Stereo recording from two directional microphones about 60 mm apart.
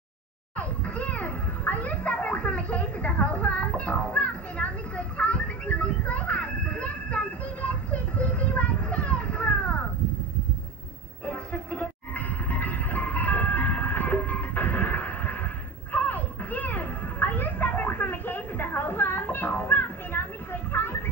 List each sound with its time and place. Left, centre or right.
0.6 s children playing: left
11.2 s music: left